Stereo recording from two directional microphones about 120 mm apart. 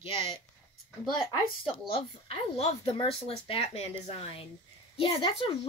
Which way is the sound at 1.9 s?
55° left (ahead or behind).